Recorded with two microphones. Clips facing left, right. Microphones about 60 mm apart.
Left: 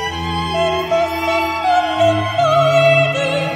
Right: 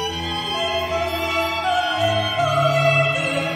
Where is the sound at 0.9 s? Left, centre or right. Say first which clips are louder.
Left 6 dB; left.